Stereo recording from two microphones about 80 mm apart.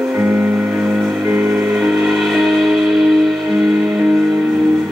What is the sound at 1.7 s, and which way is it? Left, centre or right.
Music, centre.